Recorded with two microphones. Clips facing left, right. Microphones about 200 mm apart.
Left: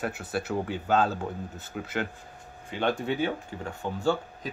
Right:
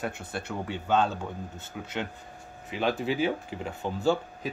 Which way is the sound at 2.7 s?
5° right (ahead or behind).